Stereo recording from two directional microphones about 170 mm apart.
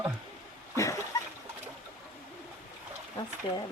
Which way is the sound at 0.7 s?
20° left (ahead or behind).